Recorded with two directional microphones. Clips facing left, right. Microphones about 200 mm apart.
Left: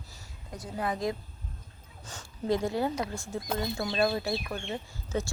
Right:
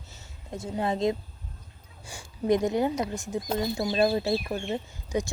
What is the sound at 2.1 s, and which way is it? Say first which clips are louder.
A woman's voice: right 5 dB; 15° right (ahead or behind).